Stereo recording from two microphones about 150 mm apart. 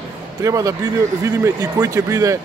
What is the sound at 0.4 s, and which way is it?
Speech, 20° right (ahead or behind).